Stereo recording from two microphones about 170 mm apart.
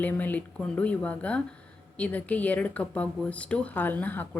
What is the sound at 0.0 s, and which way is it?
A woman's voice, 10° left (ahead or behind).